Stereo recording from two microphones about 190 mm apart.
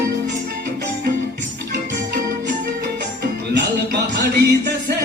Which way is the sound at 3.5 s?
65° right (ahead or behind).